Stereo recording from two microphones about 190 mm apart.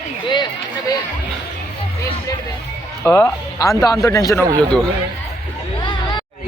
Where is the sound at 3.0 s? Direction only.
15° left (ahead or behind).